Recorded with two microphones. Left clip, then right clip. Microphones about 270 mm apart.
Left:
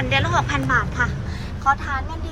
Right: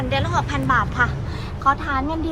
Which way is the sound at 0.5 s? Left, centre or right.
Centre.